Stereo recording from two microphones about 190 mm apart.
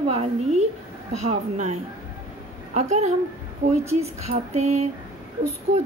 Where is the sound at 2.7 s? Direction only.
35° right (ahead or behind).